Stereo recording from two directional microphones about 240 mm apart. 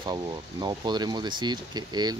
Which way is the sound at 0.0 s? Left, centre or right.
Centre.